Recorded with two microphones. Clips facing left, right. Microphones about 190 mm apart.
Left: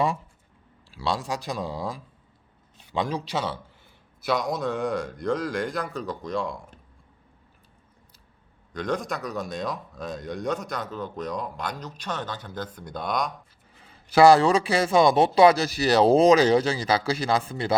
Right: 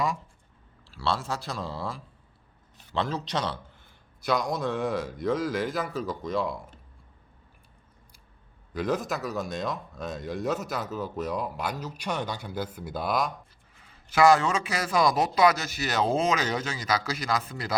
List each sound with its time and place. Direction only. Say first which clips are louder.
0.9 s speech: left 2 dB; 15° left (ahead or behind); by 6.7 s centre (ahead or behind)
8.7 s speech: even; 5° right (ahead or behind)
13.8 s speech: left 5 dB; 35° left (ahead or behind)